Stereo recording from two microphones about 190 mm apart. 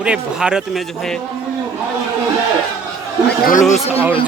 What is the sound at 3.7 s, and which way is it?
Speech, 30° left (ahead or behind).